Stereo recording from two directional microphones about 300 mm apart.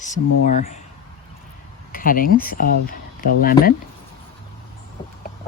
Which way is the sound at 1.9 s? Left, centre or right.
Left.